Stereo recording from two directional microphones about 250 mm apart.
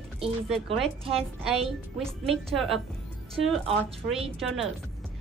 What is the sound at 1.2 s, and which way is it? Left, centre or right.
A woman's voice, centre.